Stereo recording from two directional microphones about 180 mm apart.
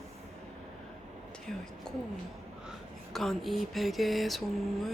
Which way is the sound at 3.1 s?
Centre (ahead or behind).